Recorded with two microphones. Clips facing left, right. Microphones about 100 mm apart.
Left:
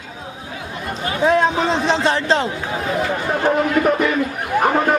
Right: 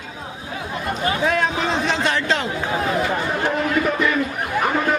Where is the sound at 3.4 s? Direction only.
50° left (ahead or behind).